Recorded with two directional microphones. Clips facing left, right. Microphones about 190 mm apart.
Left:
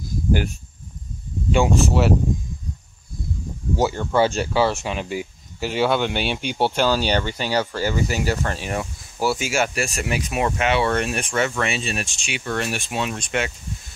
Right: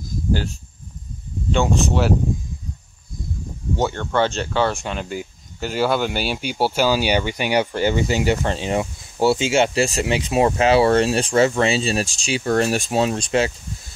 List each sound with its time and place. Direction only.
1.5 s speech: 5° left (ahead or behind)
3.7 s speech: 5° left (ahead or behind); by 13.5 s 30° right (ahead or behind)